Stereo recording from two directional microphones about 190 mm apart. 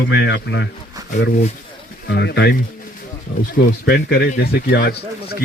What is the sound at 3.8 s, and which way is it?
A man's voice, 55° left (ahead or behind).